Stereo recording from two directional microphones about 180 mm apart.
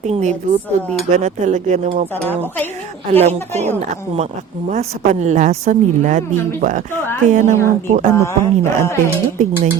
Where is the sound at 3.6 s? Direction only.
40° right (ahead or behind).